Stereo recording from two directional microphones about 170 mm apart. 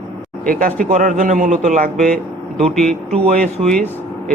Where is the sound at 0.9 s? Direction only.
50° right (ahead or behind).